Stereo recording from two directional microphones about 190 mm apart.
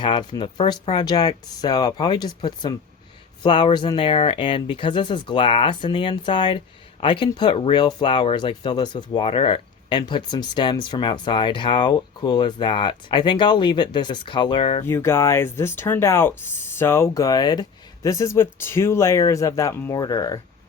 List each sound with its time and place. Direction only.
0.0 s speech: 25° left (ahead or behind)
14.8 s speech: 15° left (ahead or behind)